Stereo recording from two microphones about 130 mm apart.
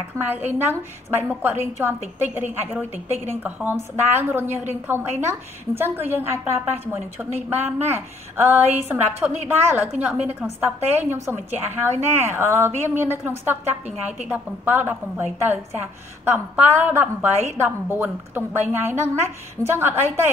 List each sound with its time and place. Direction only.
1.1 s a woman's voice: 15° right (ahead or behind)